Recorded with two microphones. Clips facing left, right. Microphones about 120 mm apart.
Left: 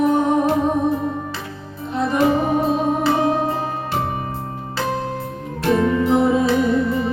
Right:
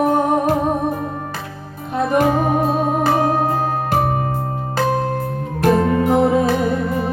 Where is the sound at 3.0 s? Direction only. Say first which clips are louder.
Right 1 dB; 45° right (ahead or behind).